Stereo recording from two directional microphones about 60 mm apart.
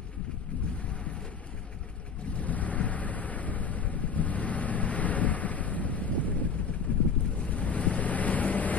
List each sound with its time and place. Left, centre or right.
2.3 s wind noise: left
6.9 s boat: left